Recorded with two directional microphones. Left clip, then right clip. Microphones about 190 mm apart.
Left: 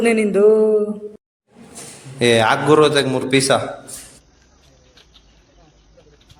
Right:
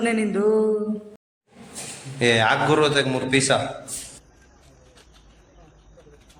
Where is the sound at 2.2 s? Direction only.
20° left (ahead or behind).